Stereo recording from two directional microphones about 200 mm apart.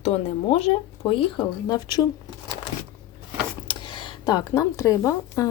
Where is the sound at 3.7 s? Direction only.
25° left (ahead or behind).